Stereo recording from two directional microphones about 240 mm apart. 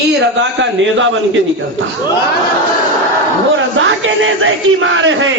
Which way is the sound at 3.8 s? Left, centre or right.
Right.